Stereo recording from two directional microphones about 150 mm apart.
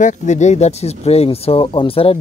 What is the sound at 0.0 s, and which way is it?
Speech, 55° left (ahead or behind).